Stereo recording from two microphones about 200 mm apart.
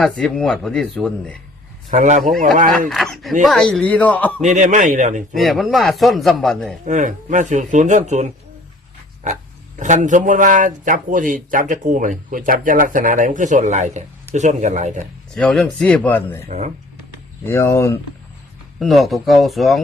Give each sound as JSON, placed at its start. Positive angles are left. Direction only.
{"t": 0.0, "sound": "a man's voice", "side_deg": 0}
{"t": 1.9, "sound": "speech", "side_deg": -35}
{"t": 2.9, "sound": "a man's voice", "side_deg": 0}
{"t": 4.4, "sound": "speech", "side_deg": -40}
{"t": 5.3, "sound": "a man's voice", "side_deg": 0}
{"t": 6.8, "sound": "speech", "side_deg": -40}
{"t": 9.7, "sound": "speech", "side_deg": -40}
{"t": 15.4, "sound": "a man's voice", "side_deg": 5}
{"t": 16.5, "sound": "speech", "side_deg": -35}
{"t": 17.4, "sound": "speech", "side_deg": 15}
{"t": 18.8, "sound": "a man's voice", "side_deg": 0}